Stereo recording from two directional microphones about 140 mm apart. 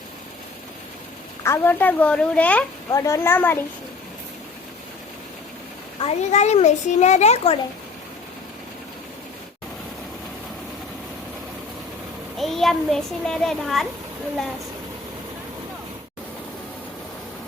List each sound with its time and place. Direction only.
1.5 s a woman's voice: 15° left (ahead or behind)
2.9 s a woman's voice: 25° left (ahead or behind)
6.0 s a child's voice: 50° left (ahead or behind)
12.4 s a child's voice: centre (ahead or behind)